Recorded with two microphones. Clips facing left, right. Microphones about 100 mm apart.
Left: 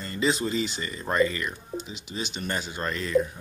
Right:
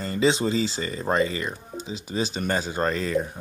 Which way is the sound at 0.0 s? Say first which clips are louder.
Right 4 dB; 30° right (ahead or behind).